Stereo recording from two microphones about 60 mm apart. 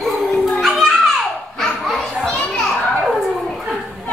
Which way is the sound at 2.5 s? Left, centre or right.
Centre.